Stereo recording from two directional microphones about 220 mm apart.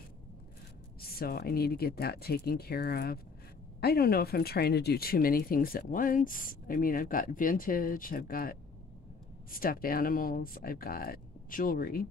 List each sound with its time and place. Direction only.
1.0 s speech: 45° left (ahead or behind)